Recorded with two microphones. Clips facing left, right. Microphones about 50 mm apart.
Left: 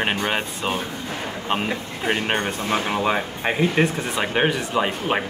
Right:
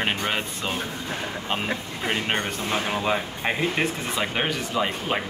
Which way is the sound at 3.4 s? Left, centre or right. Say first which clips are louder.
Left 7 dB; centre.